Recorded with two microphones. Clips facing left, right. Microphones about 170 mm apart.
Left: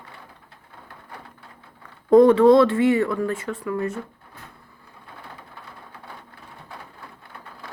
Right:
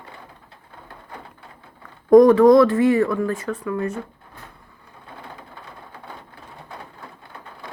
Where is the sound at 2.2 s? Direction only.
25° left (ahead or behind).